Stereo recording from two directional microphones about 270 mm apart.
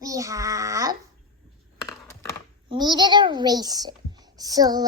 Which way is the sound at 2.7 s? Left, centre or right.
Centre.